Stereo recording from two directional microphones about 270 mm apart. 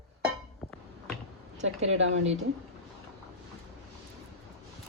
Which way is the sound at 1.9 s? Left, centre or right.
Right.